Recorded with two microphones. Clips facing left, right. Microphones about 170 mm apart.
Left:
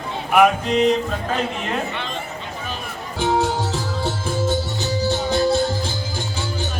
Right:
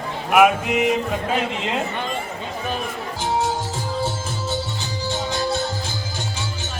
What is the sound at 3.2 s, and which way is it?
Music, 65° left (ahead or behind).